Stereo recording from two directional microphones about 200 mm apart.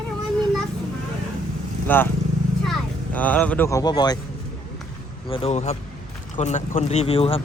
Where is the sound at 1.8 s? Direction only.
10° left (ahead or behind).